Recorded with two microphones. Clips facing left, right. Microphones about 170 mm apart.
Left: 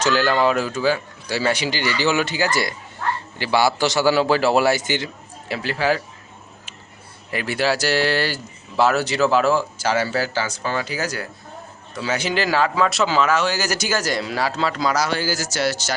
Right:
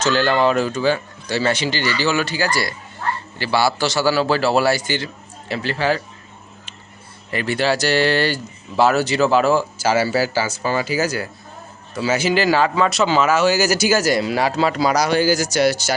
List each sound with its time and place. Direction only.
0.0 s speech: 10° left (ahead or behind)
7.3 s speech: 5° left (ahead or behind); by 16.0 s 10° right (ahead or behind)